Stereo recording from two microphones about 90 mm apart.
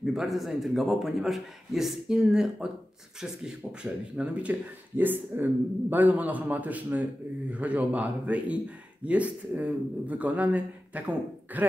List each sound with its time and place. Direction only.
0.0 s a man's voice: 5° right (ahead or behind)